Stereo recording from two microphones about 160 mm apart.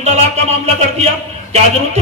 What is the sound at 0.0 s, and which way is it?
A man's voice, 45° right (ahead or behind).